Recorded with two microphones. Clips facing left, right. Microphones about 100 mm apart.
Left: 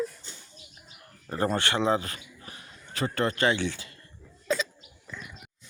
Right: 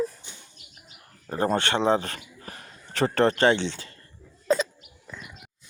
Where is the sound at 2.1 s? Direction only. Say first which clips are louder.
Right 4 dB; 45° right (ahead or behind).